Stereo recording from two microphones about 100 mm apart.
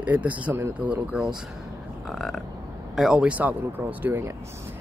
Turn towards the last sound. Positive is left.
turn(degrees=-20)  # may be behind; listen again after turning